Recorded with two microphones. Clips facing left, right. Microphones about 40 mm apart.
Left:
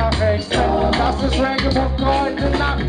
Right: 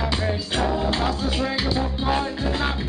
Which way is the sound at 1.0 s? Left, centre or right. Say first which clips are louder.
Left 6 dB; centre.